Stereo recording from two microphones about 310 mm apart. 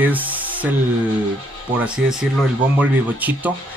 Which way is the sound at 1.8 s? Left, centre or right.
Centre.